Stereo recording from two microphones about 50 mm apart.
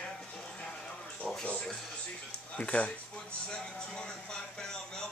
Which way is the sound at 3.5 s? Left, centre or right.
Centre.